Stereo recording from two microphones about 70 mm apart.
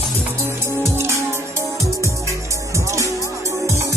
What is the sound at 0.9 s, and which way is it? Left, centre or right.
Music, right.